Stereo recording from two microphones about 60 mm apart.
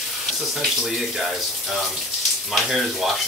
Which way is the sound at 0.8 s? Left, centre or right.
Centre.